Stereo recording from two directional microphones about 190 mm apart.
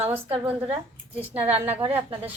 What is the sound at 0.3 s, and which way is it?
Speech, 30° right (ahead or behind).